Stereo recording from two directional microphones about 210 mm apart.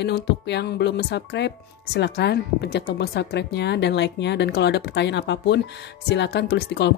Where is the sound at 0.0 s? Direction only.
55° left (ahead or behind).